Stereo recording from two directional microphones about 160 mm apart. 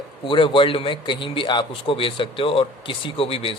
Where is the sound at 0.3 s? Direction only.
30° left (ahead or behind).